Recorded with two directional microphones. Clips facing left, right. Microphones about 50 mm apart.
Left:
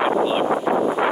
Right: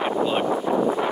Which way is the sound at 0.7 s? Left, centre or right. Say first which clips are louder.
Left 2 dB; left.